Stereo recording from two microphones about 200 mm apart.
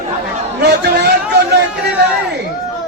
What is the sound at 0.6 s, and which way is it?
Speech, 55° right (ahead or behind).